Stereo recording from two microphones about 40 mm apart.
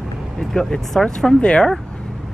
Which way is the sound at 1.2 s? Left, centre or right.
Left.